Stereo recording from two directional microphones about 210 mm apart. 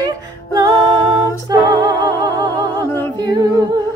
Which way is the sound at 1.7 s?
20° right (ahead or behind).